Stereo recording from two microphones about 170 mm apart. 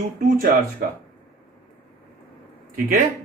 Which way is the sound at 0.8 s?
60° right (ahead or behind).